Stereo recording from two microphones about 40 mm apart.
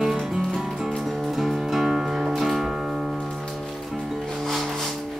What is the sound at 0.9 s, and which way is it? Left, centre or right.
Music, centre.